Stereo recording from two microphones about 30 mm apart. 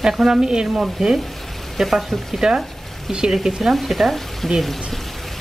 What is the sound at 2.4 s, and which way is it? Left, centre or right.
Speech, right.